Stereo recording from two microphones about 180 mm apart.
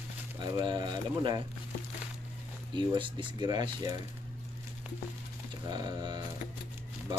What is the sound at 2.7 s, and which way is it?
Speech, 25° right (ahead or behind).